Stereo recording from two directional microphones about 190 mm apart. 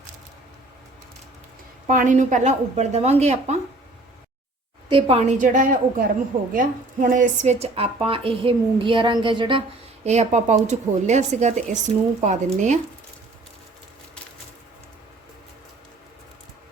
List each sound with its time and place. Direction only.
1.9 s a woman's voice: 45° right (ahead or behind)
4.9 s a woman's voice: 30° right (ahead or behind)